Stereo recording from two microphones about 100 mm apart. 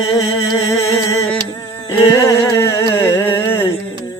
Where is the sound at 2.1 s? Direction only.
30° left (ahead or behind).